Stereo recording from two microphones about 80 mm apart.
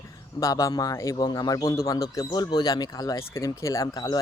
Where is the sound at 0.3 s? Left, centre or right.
Left.